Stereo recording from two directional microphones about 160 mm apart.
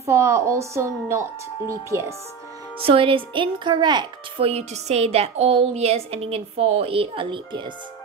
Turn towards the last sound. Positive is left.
turn(degrees=-30)  # may be behind; listen again after turning